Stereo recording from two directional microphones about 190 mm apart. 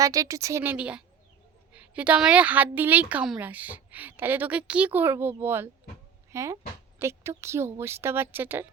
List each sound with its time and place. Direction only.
0.0 s a woman's voice: 20° right (ahead or behind)